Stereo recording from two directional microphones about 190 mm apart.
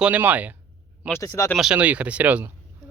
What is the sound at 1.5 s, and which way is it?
Speech, 5° right (ahead or behind).